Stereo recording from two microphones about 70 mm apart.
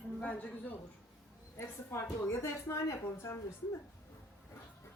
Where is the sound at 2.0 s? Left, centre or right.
Left.